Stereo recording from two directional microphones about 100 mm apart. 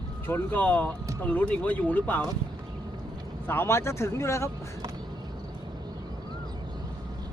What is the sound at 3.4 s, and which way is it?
Speech, 25° left (ahead or behind).